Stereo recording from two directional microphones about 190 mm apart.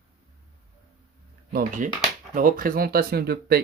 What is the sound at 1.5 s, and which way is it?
Speech, 45° right (ahead or behind).